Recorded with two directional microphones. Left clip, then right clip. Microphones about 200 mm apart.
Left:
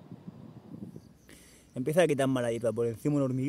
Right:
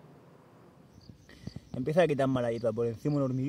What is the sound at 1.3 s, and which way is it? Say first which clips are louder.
Speech: right 1 dB; 10° left (ahead or behind).